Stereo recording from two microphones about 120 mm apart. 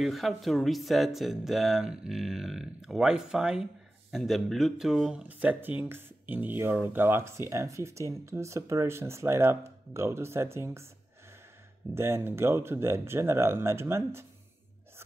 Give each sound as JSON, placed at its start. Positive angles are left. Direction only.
{"t": 0.0, "sound": "speech", "side_deg": 0}
{"t": 11.9, "sound": "speech", "side_deg": -20}